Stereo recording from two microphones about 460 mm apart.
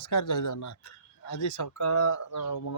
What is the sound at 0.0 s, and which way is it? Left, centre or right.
Speech, left.